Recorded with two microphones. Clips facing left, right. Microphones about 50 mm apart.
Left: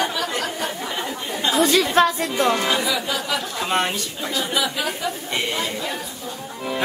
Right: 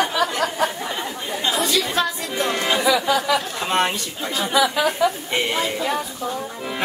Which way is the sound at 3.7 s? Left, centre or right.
Centre.